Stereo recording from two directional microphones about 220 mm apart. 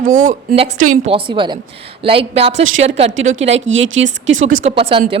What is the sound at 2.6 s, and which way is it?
Speech, 60° right (ahead or behind).